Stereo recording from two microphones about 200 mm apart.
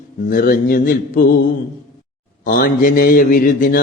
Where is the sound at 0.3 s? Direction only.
45° left (ahead or behind).